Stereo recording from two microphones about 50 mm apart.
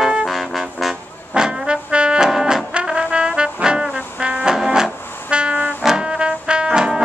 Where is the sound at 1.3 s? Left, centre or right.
Centre.